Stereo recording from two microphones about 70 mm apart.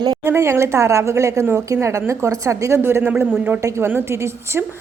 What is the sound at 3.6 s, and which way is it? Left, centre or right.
Speech, right.